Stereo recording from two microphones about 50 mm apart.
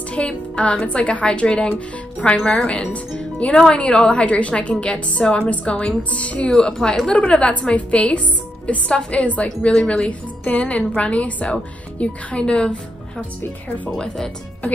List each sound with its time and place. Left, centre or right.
0.1 s a woman's voice: left
6.5 s a woman's voice: centre
13.9 s a woman's voice: centre